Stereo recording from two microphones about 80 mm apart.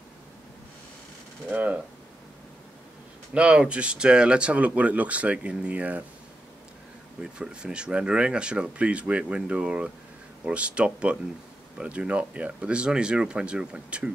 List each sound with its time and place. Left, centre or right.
1.5 s speech: centre
3.3 s speech: centre
7.2 s speech: centre